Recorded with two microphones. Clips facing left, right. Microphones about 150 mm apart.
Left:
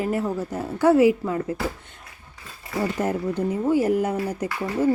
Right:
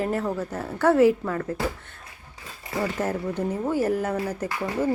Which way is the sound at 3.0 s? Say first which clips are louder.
Left 2 dB; 15° left (ahead or behind).